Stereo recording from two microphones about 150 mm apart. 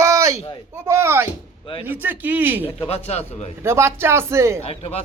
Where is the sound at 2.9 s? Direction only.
45° left (ahead or behind).